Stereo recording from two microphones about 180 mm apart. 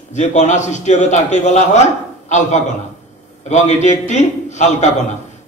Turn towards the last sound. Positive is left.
turn(degrees=40)  # may be behind; listen again after turning